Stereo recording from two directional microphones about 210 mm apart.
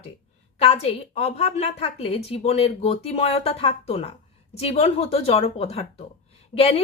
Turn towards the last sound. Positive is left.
turn(degrees=30)  # may be behind; listen again after turning